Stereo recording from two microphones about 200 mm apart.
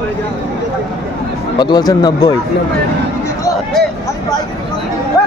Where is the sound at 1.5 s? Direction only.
20° left (ahead or behind).